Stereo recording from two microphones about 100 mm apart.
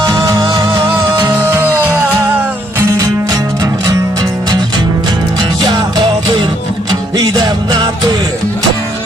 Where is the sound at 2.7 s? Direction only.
30° right (ahead or behind).